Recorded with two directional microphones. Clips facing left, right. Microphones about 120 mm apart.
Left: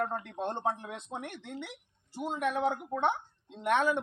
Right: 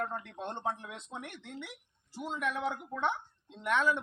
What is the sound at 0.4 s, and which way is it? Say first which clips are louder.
Speech: left 4 dB; 45° left (ahead or behind).